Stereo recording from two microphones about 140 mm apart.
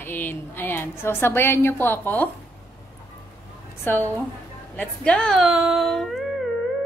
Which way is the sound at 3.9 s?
15° left (ahead or behind).